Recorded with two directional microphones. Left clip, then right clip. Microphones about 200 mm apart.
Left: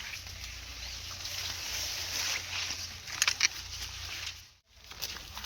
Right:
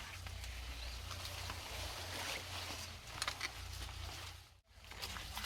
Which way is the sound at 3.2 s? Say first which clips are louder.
Left 14 dB; 15° left (ahead or behind).